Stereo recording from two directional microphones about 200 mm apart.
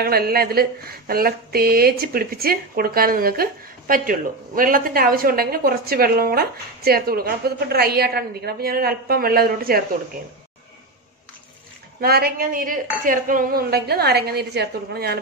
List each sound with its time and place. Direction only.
0.0 s speech: 50° right (ahead or behind)
12.0 s speech: 50° right (ahead or behind)